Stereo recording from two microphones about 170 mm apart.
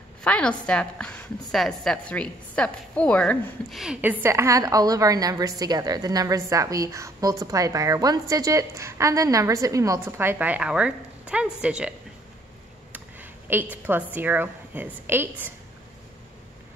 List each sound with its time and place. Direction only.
0.2 s a woman's voice: 5° left (ahead or behind)
12.9 s a sound: 10° right (ahead or behind)
14.1 s a woman's voice: 10° right (ahead or behind)